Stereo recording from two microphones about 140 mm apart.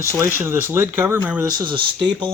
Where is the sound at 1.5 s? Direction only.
35° right (ahead or behind).